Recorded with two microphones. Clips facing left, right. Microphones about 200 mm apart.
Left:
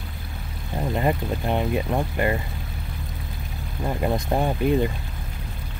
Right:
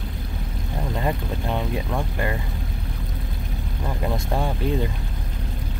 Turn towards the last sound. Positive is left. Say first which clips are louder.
# left 3 dB
turn(degrees=15)  # may be behind; listen again after turning